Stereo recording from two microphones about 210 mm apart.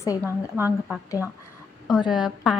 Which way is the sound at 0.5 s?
10° right (ahead or behind).